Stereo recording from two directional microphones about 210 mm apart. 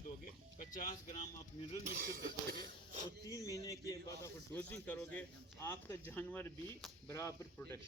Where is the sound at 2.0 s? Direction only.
50° right (ahead or behind).